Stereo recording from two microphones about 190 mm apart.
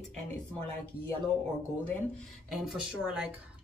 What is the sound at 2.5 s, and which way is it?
Speech, centre (ahead or behind).